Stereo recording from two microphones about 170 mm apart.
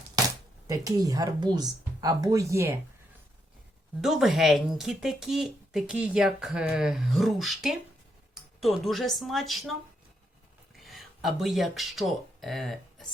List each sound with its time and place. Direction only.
0.7 s speech: 20° right (ahead or behind)
4.0 s speech: centre (ahead or behind)
10.8 s speech: centre (ahead or behind)